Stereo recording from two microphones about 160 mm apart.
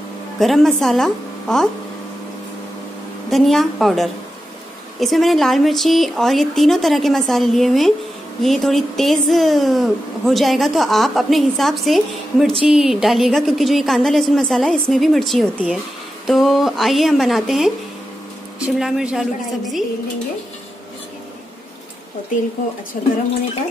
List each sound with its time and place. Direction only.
0.4 s a woman's voice: centre (ahead or behind)
3.3 s a woman's voice: centre (ahead or behind)
18.8 s a woman's voice: 5° right (ahead or behind)
23.0 s speech: 55° left (ahead or behind)